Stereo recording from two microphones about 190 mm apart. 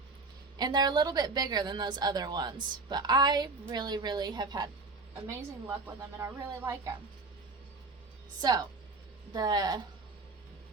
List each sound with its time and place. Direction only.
0.6 s a woman's voice: 20° right (ahead or behind)
8.4 s a woman's voice: 20° right (ahead or behind)